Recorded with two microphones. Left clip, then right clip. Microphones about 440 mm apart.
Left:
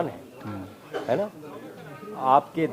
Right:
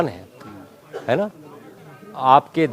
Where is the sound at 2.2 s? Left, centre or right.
Right.